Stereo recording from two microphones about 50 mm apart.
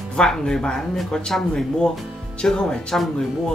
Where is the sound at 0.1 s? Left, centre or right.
Centre.